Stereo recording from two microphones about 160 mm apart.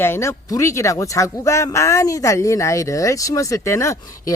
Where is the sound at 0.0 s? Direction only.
15° left (ahead or behind).